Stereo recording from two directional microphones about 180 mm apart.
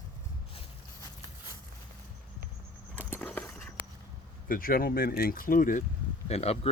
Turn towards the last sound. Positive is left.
turn(degrees=35)  # may be behind; listen again after turning